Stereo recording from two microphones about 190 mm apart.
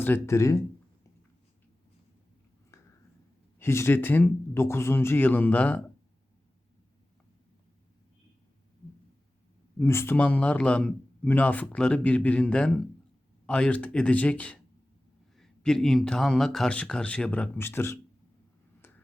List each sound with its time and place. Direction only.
0.0 s a man's voice: 10° left (ahead or behind)
3.6 s a man's voice: 15° left (ahead or behind)
9.7 s a man's voice: 10° left (ahead or behind)
18.8 s finger snapping: 10° left (ahead or behind)